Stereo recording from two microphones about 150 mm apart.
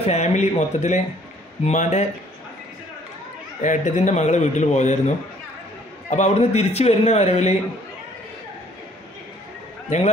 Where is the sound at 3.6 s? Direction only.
55° left (ahead or behind).